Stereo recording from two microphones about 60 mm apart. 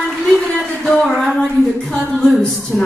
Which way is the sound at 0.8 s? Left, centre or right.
Centre.